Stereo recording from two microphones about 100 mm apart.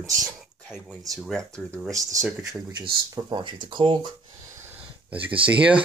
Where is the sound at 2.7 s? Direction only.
45° right (ahead or behind).